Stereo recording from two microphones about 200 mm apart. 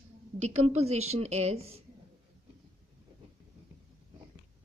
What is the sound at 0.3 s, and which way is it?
A woman's voice, 35° right (ahead or behind).